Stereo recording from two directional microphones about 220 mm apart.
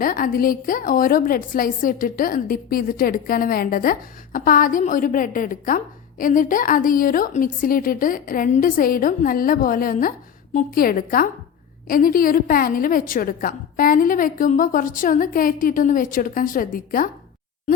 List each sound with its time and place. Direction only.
0.0 s a woman's voice: 40° left (ahead or behind)